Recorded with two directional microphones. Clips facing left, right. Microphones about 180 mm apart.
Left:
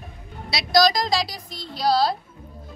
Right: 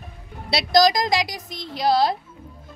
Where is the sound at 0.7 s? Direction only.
20° right (ahead or behind).